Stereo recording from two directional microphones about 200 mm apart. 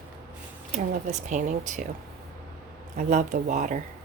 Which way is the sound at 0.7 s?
35° right (ahead or behind).